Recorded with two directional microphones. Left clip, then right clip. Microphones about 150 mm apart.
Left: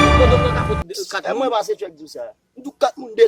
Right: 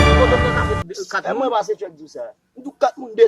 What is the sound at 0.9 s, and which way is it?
Music, 25° left (ahead or behind).